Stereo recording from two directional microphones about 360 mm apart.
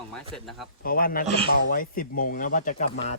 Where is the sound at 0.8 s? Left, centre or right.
Left.